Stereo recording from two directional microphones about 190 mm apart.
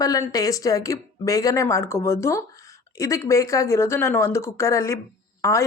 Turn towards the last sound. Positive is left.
turn(degrees=15)  # may be behind; listen again after turning